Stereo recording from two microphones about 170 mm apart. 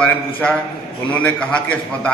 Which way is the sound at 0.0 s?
10° left (ahead or behind).